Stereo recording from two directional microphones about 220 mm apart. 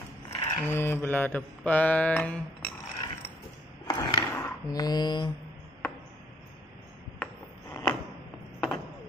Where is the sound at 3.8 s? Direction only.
20° left (ahead or behind).